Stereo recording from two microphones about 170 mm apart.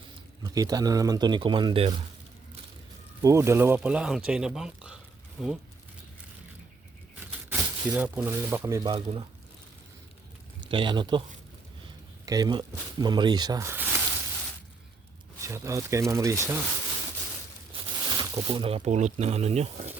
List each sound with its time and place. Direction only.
0.4 s speech: 20° right (ahead or behind)
3.2 s speech: 15° right (ahead or behind)
7.5 s speech: 10° right (ahead or behind)
8.8 s speech: 30° right (ahead or behind)
10.7 s speech: 30° right (ahead or behind)
12.2 s speech: 20° right (ahead or behind)
15.4 s speech: 15° right (ahead or behind)
17.7 s speech: 30° right (ahead or behind)